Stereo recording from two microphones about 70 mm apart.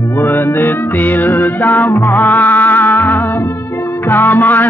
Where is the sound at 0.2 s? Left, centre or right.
Left.